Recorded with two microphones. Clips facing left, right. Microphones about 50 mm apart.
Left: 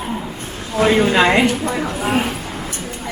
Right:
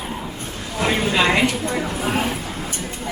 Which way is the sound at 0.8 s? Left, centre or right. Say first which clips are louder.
Left 6 dB; left.